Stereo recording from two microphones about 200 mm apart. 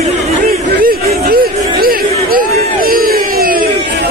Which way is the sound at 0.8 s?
45° right (ahead or behind).